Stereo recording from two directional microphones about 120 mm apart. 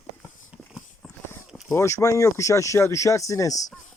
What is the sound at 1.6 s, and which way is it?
Speech, 25° left (ahead or behind).